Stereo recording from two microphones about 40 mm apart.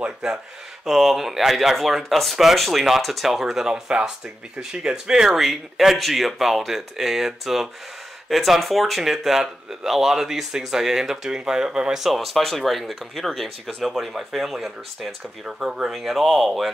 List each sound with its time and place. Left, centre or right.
0.2 s speech: centre
12.0 s speech: centre
13.7 s speech: centre
15.4 s speech: centre
15.9 s speech: centre